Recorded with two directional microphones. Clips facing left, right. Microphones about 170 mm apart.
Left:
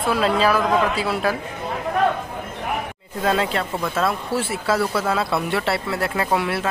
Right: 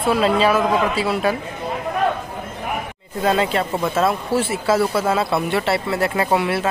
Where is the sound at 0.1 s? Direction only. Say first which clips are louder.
Right 2 dB; centre (ahead or behind).